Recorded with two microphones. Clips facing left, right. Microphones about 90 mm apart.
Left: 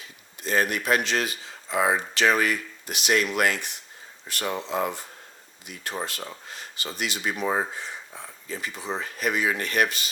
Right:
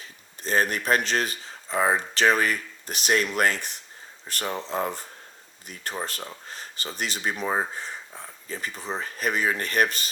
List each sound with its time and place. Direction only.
0.0 s speech: 35° right (ahead or behind)